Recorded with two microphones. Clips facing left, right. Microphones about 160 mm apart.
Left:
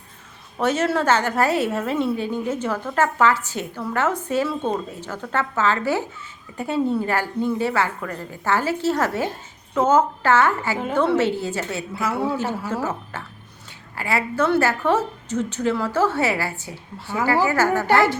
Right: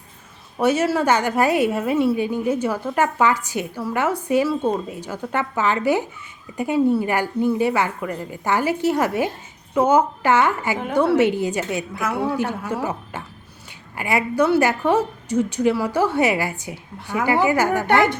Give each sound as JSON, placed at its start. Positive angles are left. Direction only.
{"t": 0.6, "sound": "a woman's voice", "side_deg": -10}